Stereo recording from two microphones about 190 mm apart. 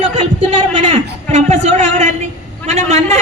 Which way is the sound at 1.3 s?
35° right (ahead or behind).